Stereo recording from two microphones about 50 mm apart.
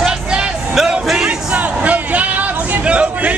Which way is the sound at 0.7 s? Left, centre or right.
Centre.